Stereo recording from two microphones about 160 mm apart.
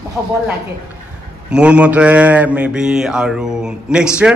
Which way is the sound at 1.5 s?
5° right (ahead or behind).